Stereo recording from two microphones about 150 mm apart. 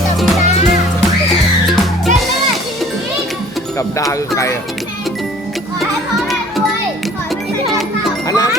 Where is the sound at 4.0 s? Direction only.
20° left (ahead or behind).